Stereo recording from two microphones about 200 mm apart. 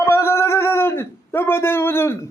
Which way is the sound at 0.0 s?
15° left (ahead or behind).